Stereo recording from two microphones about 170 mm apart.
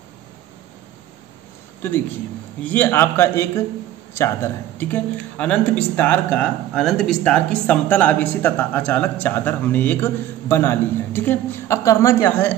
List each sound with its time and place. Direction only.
2.6 s speech: 10° left (ahead or behind)